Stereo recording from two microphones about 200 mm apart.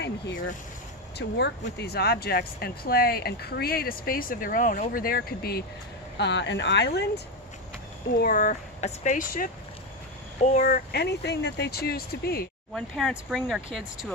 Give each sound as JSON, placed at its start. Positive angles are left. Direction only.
{"t": 1.1, "sound": "speech", "side_deg": 55}
{"t": 6.1, "sound": "speech", "side_deg": 60}
{"t": 8.2, "sound": "speech", "side_deg": 45}
{"t": 12.7, "sound": "speech", "side_deg": 0}